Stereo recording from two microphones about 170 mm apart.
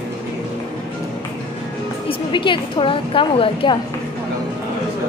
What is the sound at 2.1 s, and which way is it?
A woman's voice, 30° left (ahead or behind).